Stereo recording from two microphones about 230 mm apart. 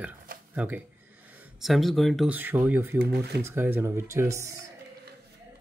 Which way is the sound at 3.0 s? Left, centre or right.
Right.